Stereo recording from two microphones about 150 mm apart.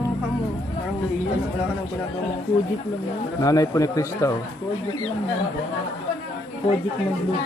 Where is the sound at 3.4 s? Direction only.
25° left (ahead or behind).